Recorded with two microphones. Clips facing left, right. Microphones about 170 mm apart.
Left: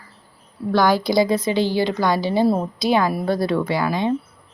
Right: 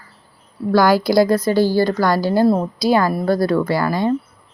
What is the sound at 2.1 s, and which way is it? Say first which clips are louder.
A woman's voice: right 2 dB; centre (ahead or behind).